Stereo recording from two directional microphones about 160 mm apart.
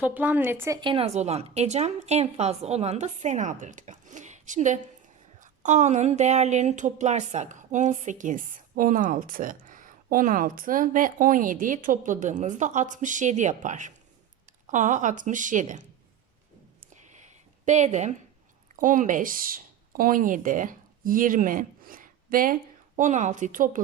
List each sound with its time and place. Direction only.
0.0 s a woman's voice: 10° right (ahead or behind)
0.8 s speech: 35° right (ahead or behind); by 15.9 s 50° right (ahead or behind)
16.9 s a sound: 50° right (ahead or behind)
18.8 s speech: 55° right (ahead or behind)
23.0 s speech: 50° right (ahead or behind)